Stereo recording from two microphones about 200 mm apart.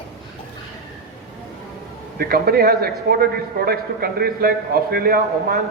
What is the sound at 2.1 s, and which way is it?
A man's voice, 50° right (ahead or behind).